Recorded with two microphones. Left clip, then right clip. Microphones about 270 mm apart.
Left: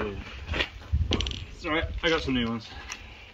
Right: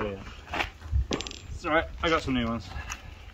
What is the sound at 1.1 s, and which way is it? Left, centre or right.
Coin, right.